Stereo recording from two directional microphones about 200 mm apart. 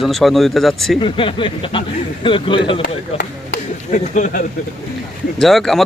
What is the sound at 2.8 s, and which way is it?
Speech, 50° left (ahead or behind).